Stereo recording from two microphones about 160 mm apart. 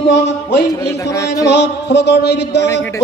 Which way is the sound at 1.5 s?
90° left.